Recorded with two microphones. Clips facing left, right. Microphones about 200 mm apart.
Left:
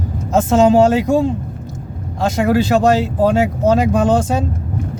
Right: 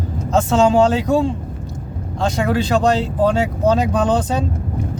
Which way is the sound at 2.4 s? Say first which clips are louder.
Left 4 dB; 5° left (ahead or behind).